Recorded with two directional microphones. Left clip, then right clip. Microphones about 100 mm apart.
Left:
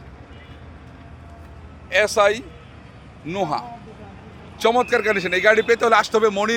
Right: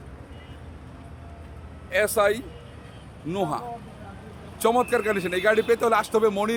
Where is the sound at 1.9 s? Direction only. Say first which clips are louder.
Left 5 dB; 20° right (ahead or behind).